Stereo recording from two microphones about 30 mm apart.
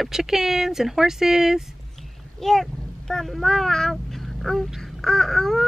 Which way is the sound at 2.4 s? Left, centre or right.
Centre.